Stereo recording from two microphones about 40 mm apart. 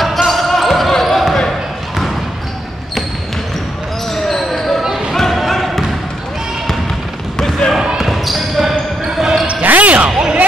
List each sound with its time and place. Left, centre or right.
0.0 s basketball bounce: centre
4.1 s basketball bounce: centre
7.3 s a sound: centre
8.0 s basketball bounce: centre
9.6 s basketball bounce: right
10.0 s a sound: right